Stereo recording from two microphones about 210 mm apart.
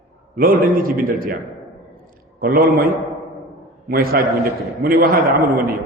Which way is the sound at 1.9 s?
45° right (ahead or behind).